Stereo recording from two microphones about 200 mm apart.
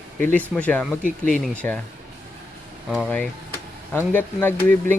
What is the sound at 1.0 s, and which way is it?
Speech, 40° left (ahead or behind).